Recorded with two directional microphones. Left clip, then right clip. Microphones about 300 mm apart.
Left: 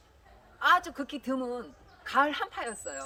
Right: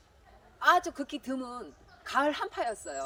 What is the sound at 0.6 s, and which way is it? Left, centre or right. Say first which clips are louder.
A woman's voice: even; centre.